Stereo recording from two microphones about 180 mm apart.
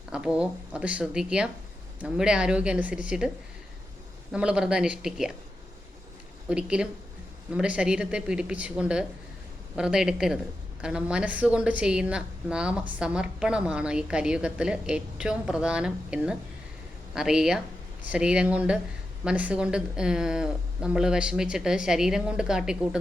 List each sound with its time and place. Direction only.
0.1 s a woman's voice: 5° right (ahead or behind)
4.3 s a woman's voice: 5° right (ahead or behind)
6.5 s a woman's voice: 5° right (ahead or behind)